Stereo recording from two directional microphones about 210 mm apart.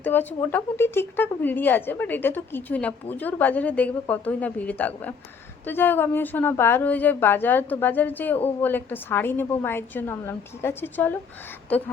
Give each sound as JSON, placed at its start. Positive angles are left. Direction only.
{"t": 0.0, "sound": "a woman's voice", "side_deg": 10}